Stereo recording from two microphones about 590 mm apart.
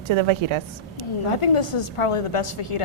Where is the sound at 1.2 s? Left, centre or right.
Left.